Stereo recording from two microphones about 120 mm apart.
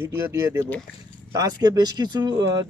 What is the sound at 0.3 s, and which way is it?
Speech, 25° right (ahead or behind).